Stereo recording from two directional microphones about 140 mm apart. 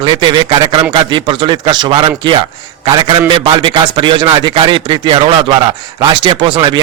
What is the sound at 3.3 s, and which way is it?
A man's voice, 35° right (ahead or behind).